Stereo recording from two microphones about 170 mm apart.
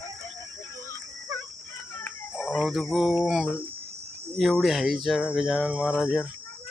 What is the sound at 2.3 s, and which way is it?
Speech, centre (ahead or behind).